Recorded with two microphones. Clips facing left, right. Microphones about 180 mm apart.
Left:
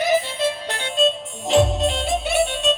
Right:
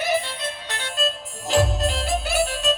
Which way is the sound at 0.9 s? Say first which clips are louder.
Left 7 dB; centre (ahead or behind).